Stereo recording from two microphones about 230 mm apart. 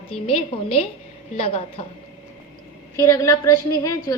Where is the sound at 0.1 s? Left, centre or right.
Left.